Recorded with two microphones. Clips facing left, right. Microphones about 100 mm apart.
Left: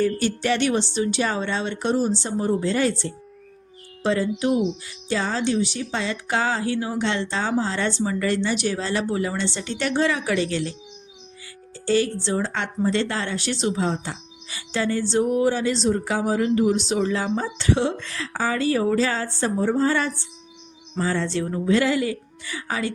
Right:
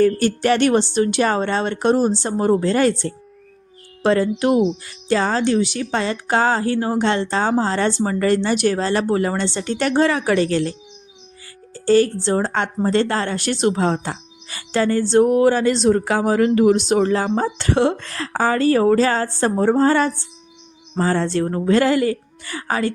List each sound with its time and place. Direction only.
0.0 s a woman's voice: 50° right (ahead or behind)
11.9 s a woman's voice: 45° right (ahead or behind)